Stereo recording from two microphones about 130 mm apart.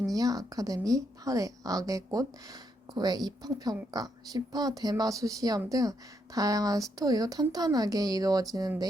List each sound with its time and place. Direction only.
0.1 s speech: 30° right (ahead or behind)